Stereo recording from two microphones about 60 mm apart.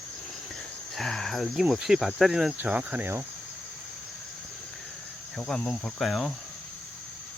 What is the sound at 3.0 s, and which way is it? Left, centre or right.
Cricket, right.